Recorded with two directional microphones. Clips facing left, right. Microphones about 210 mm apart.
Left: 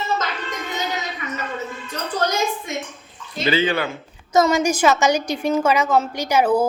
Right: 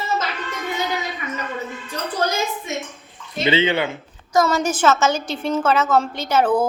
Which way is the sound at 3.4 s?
25° right (ahead or behind).